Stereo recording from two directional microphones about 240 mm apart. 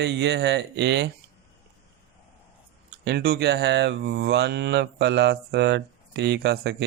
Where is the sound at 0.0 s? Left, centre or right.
Right.